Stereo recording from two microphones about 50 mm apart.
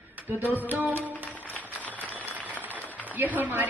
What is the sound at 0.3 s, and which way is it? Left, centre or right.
Speech, right.